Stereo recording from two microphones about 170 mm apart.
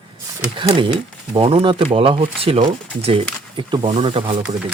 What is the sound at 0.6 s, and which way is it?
Speech, 30° right (ahead or behind).